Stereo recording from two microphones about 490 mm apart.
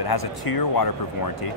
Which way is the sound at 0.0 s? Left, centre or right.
Left.